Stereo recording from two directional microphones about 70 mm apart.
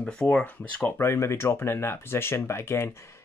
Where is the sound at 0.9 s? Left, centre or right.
Left.